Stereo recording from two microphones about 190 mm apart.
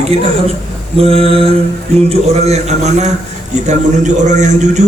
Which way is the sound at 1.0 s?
30° right (ahead or behind).